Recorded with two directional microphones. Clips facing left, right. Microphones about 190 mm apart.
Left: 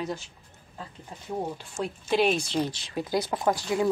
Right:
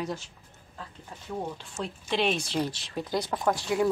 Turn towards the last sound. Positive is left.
turn(degrees=0)  # may be behind; listen again after turning